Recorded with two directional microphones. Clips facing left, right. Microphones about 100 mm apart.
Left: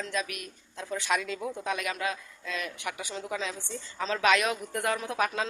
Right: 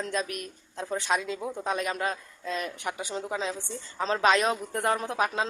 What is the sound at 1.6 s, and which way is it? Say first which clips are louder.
A woman's voice: right 3 dB; 35° right (ahead or behind).